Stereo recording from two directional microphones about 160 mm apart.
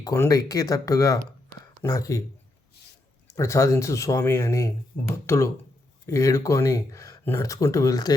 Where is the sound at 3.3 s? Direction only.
20° left (ahead or behind).